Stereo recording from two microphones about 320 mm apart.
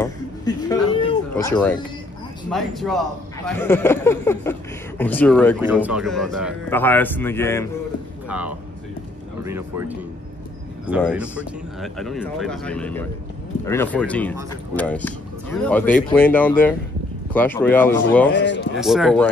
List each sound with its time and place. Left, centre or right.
0.0 s a sound: centre
2.5 s a man's voice: centre
8.3 s a man's voice: centre
18.3 s speech: left
18.8 s a man's voice: centre